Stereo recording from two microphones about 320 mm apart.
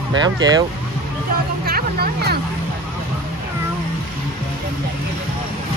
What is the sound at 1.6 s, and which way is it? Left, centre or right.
Speech, right.